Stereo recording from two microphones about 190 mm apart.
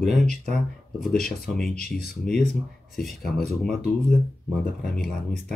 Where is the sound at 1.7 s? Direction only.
50° left (ahead or behind).